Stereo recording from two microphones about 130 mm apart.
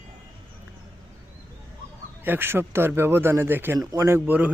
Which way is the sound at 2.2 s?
15° right (ahead or behind).